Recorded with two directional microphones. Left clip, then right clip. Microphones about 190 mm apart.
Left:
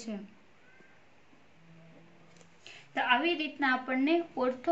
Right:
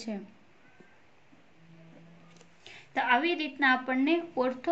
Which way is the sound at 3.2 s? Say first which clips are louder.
Right 3 dB; 35° right (ahead or behind).